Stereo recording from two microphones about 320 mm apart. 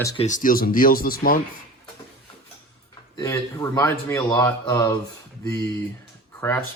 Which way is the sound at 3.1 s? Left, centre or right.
Centre.